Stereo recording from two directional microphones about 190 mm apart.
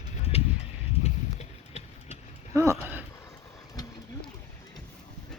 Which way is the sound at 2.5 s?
15° right (ahead or behind).